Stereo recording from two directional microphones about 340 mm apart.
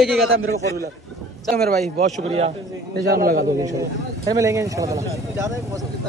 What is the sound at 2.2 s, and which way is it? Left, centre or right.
A man's voice, centre.